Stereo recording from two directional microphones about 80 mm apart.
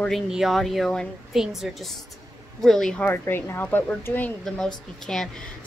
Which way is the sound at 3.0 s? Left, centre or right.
Left.